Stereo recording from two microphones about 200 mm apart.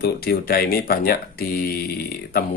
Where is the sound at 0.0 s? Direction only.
50° left (ahead or behind).